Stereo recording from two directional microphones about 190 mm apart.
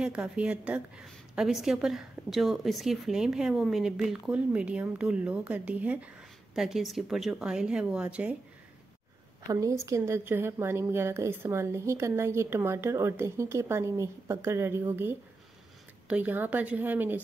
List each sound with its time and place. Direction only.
0.0 s a woman's voice: 5° right (ahead or behind)
9.5 s speech: 15° right (ahead or behind)